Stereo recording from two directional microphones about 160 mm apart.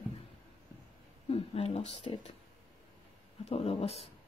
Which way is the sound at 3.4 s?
40° left (ahead or behind).